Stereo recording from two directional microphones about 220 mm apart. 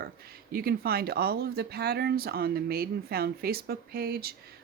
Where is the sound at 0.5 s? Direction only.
45° right (ahead or behind).